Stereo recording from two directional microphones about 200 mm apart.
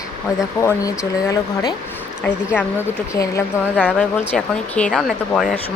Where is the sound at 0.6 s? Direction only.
15° left (ahead or behind).